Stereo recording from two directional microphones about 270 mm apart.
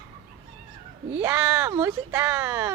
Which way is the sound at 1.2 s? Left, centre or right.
Centre.